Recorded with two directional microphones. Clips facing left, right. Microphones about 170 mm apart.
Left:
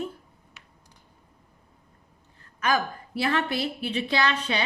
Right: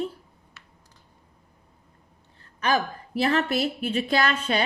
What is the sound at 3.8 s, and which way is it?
Speech, 45° right (ahead or behind).